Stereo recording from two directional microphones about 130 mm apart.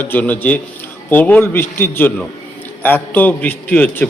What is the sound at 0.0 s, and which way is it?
A man's voice, 15° left (ahead or behind).